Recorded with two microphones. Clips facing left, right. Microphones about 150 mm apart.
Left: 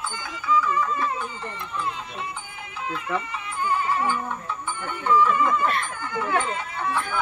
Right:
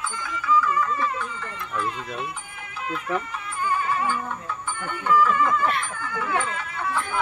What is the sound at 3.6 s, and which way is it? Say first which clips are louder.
Speech: left 1 dB; 15° left (ahead or behind).